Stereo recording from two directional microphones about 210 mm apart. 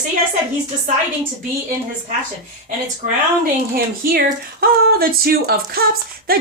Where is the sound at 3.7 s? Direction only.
45° right (ahead or behind).